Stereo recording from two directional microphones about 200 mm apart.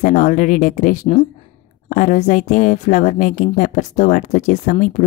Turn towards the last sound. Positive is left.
turn(degrees=35)  # may be behind; listen again after turning